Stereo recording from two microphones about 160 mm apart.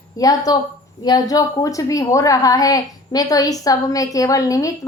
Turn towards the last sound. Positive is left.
turn(degrees=20)  # may be behind; listen again after turning